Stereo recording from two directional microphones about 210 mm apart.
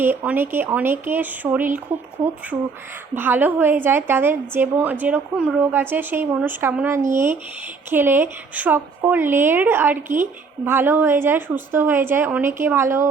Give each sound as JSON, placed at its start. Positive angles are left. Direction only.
{"t": 0.0, "sound": "a woman's voice", "side_deg": -10}